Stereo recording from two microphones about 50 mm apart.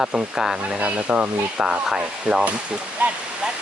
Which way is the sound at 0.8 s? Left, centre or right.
Right.